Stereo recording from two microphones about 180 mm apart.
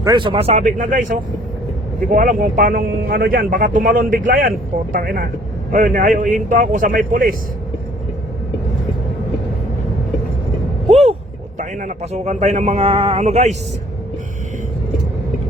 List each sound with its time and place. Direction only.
0.0 s speech: 25° right (ahead or behind); by 7.3 s 50° right (ahead or behind)
10.8 s vehicle: 35° right (ahead or behind)
11.5 s speech: 45° right (ahead or behind)